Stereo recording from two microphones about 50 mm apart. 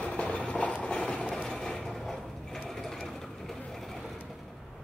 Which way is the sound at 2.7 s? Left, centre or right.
Centre.